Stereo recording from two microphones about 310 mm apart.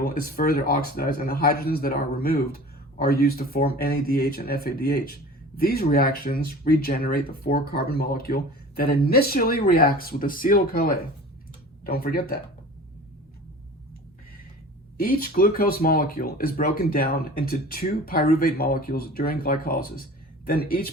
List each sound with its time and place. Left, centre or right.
0.0 s speech: left
14.9 s speech: left